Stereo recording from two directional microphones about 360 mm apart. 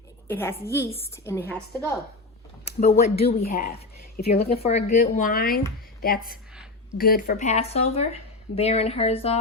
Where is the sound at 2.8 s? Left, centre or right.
Centre.